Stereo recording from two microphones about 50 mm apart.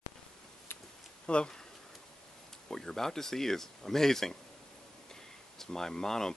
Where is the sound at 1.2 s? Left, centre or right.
Centre.